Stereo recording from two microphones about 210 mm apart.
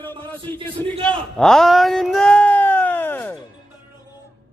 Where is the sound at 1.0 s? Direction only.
5° left (ahead or behind).